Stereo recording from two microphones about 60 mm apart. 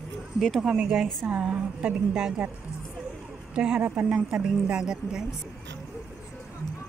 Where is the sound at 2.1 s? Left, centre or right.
Centre.